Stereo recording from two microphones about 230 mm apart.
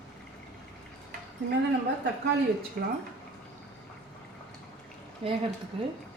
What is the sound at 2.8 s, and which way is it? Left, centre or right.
Speech, right.